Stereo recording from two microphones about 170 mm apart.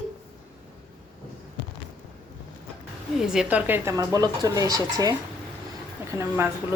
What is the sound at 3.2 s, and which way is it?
Speech, 5° right (ahead or behind).